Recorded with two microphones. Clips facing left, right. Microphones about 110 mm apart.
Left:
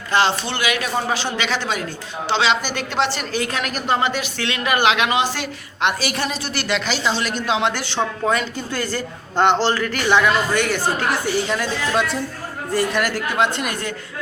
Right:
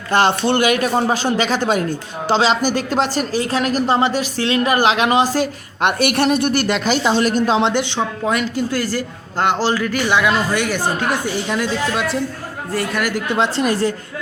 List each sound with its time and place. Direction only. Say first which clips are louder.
0.1 s speech: right 4 dB; 50° right (ahead or behind)
6.0 s speech: right 9 dB; 65° right (ahead or behind); by 7.7 s 40° right (ahead or behind)
7.7 s speech: right 4 dB; 20° right (ahead or behind)
12.7 s a man's voice: left 1 dB; centre (ahead or behind)
13.1 s speech: right 3 dB; 20° right (ahead or behind)
13.4 s speech: right 5 dB; 30° right (ahead or behind)